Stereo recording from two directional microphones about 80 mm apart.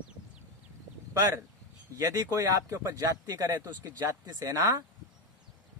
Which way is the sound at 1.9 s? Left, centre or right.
Right.